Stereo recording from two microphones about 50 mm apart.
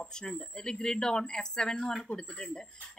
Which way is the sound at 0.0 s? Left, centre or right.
Centre.